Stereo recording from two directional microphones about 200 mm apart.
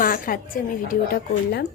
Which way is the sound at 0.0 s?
45° left (ahead or behind).